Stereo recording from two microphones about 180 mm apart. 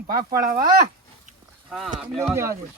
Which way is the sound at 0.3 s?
50° right (ahead or behind).